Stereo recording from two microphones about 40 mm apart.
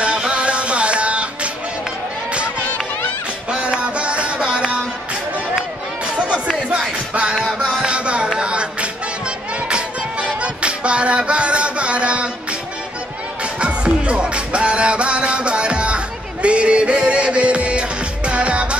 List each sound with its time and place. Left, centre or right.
0.0 s music: right
2.6 s music: left
3.4 s music: right
6.0 s chatter: right
7.2 s music: right
13.4 s music: right